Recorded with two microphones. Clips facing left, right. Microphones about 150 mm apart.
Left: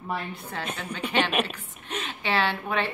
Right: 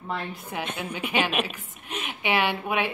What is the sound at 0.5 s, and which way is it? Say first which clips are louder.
A woman's voice: right 2 dB; 15° right (ahead or behind).